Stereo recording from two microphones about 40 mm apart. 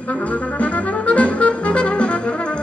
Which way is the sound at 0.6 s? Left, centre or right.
Left.